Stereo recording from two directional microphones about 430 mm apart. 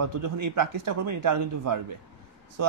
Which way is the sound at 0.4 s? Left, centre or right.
Right.